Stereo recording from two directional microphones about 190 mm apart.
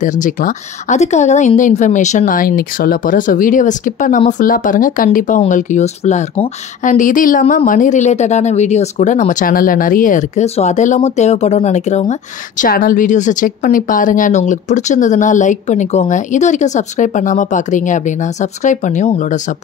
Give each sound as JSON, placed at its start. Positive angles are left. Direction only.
{"t": 0.0, "sound": "speech", "side_deg": 45}